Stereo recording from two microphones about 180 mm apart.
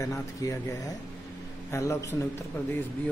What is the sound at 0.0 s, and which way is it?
Speech, 20° left (ahead or behind).